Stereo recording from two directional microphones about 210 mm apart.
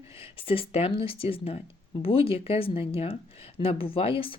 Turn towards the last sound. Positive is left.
turn(degrees=25)  # may be behind; listen again after turning